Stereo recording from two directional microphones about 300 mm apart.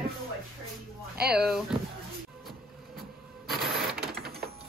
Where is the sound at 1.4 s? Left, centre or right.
Centre.